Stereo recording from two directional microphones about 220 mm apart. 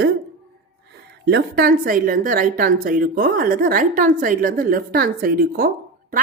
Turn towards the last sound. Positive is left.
turn(degrees=-40)  # may be behind; listen again after turning